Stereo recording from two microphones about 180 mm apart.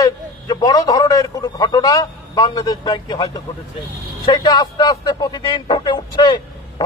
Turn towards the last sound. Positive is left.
turn(degrees=25)  # may be behind; listen again after turning